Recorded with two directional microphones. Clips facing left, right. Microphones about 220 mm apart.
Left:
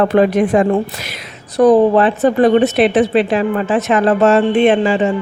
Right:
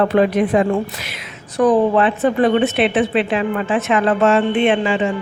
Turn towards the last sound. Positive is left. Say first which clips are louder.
# left 4 dB
turn(degrees=40)  # may be behind; listen again after turning